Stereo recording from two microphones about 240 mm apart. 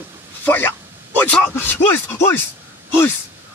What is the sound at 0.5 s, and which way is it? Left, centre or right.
Speech, centre.